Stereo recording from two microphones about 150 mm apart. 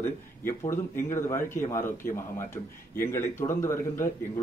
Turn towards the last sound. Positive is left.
turn(degrees=15)  # may be behind; listen again after turning